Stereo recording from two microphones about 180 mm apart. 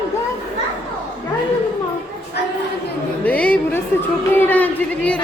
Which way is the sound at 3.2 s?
10° left (ahead or behind).